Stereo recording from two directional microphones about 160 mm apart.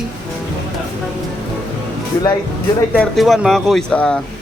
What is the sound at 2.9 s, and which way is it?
Speech, 5° left (ahead or behind).